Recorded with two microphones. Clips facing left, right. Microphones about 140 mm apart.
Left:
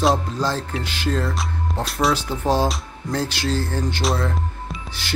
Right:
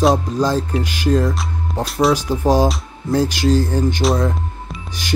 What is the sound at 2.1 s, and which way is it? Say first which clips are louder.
Speech: right 5 dB; 10° right (ahead or behind).